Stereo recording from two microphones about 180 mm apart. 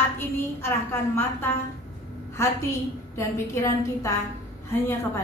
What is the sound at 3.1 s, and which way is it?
A woman's voice, 15° left (ahead or behind).